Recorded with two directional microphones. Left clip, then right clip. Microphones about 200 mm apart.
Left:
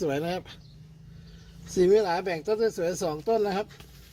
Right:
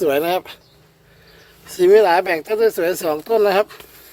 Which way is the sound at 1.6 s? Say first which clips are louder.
Right 10 dB; 25° right (ahead or behind).